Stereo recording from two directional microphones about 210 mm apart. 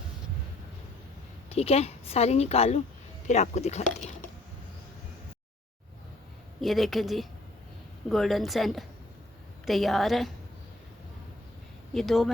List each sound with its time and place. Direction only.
1.5 s a woman's voice: 30° left (ahead or behind)
6.6 s speech: centre (ahead or behind)
11.9 s speech: centre (ahead or behind)